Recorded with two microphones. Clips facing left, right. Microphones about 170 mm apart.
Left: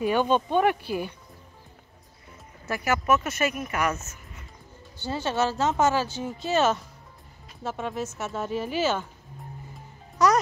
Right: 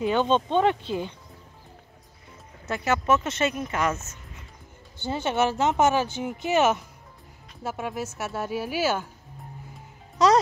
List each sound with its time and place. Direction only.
0.3 s speech: 20° right (ahead or behind)
2.6 s speech: 20° right (ahead or behind)
5.0 s speech: 20° right (ahead or behind)
10.1 s music: 25° right (ahead or behind)